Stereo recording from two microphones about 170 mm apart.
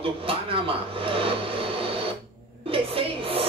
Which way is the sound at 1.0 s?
30° right (ahead or behind).